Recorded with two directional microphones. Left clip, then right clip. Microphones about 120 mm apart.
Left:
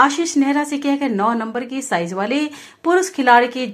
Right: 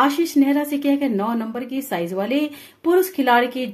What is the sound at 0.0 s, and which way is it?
A woman's voice, 15° right (ahead or behind).